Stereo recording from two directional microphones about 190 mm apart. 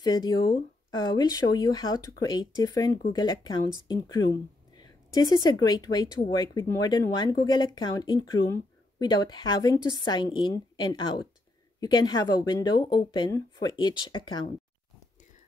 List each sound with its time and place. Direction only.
0.0 s speech: 20° left (ahead or behind)